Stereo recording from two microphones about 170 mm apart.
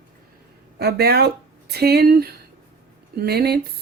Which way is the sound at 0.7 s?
70° right (ahead or behind).